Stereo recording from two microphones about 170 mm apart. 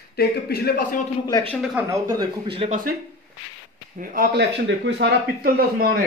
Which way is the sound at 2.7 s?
55° right (ahead or behind).